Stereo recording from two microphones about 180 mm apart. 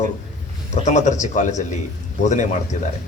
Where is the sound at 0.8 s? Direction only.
40° left (ahead or behind).